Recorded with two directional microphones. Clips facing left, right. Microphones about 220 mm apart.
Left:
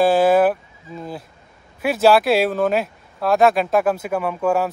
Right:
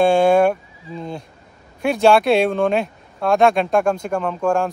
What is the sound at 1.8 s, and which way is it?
Speech, 5° left (ahead or behind).